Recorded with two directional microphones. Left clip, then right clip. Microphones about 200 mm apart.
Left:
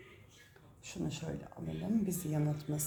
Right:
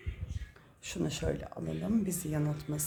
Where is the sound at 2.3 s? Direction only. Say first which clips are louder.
Right 2 dB; 10° right (ahead or behind).